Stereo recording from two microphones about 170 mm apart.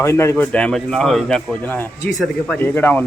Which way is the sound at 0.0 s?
15° left (ahead or behind).